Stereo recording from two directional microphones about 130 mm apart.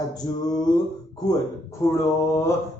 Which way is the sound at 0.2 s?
30° left (ahead or behind).